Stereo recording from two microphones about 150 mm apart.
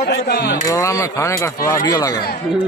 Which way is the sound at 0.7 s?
20° left (ahead or behind).